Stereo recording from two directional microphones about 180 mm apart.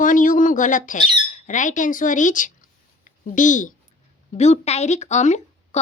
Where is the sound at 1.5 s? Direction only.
45° left (ahead or behind).